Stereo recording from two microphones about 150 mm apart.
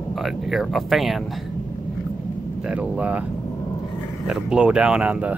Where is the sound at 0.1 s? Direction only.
Centre (ahead or behind).